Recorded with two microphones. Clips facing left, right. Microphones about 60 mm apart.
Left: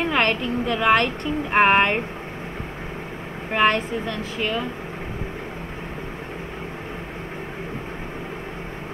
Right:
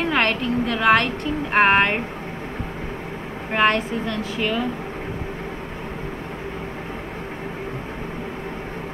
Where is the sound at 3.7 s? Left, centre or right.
Left.